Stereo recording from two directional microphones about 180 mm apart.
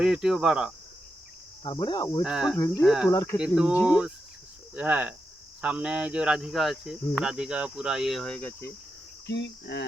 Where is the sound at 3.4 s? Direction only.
5° right (ahead or behind).